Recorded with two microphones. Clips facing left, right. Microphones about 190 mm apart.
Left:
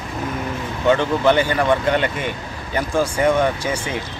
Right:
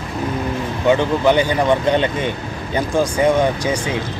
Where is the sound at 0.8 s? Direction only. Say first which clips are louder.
Right 1 dB; 15° right (ahead or behind).